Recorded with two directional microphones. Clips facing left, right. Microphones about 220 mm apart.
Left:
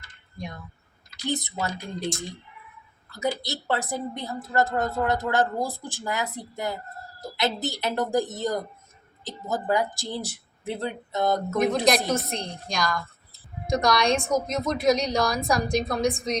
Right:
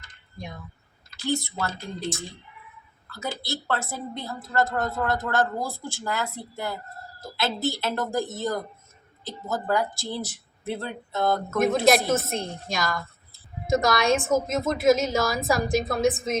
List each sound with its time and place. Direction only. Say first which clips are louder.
1.3 s a woman's voice: right 1 dB; 20° left (ahead or behind)
3.1 s a woman's voice: left 4 dB; 15° left (ahead or behind)
11.5 s a woman's voice: right 3 dB; 5° right (ahead or behind)